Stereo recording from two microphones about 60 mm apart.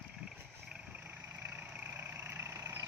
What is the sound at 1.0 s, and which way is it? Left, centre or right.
Vehicle, right.